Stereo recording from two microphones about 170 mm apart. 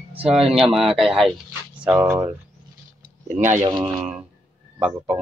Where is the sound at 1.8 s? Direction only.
15° right (ahead or behind).